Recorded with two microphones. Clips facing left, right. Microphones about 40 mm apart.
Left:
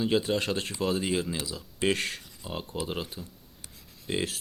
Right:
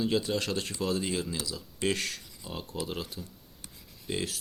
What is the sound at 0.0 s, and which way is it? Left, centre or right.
Speech, left.